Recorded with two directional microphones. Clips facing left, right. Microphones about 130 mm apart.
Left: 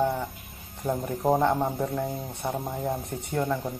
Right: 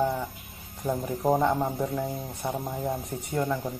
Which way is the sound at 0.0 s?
5° left (ahead or behind).